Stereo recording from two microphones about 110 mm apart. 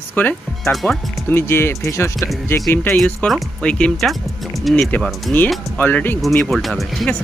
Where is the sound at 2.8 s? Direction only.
10° left (ahead or behind).